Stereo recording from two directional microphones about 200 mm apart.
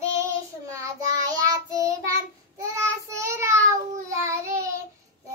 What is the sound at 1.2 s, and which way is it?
Child singing, 15° right (ahead or behind).